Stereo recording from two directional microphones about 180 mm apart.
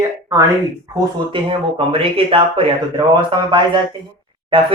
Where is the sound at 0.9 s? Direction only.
30° right (ahead or behind).